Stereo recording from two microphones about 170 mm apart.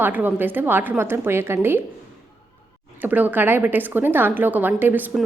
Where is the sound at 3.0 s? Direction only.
10° right (ahead or behind).